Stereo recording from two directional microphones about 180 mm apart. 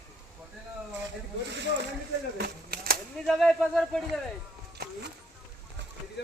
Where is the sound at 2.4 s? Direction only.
60° right (ahead or behind).